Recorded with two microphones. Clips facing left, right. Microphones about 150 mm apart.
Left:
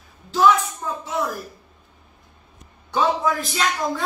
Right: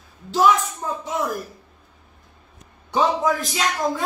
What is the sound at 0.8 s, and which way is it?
Speech, 25° right (ahead or behind).